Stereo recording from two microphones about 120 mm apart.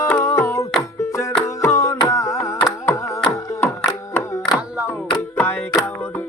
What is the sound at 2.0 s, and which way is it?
Carnatic music, 25° left (ahead or behind).